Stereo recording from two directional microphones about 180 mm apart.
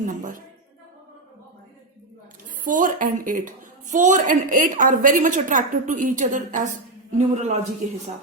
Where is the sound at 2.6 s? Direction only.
45° right (ahead or behind).